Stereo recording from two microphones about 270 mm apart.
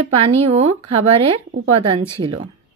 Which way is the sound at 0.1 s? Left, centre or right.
Right.